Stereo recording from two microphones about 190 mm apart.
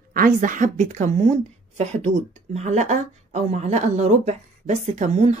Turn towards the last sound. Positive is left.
turn(degrees=-35)  # may be behind; listen again after turning